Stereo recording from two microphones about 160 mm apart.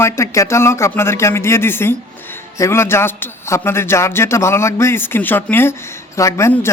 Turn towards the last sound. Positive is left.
turn(degrees=15)  # may be behind; listen again after turning